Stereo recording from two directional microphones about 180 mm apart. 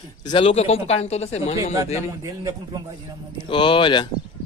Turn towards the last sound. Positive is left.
turn(degrees=25)  # may be behind; listen again after turning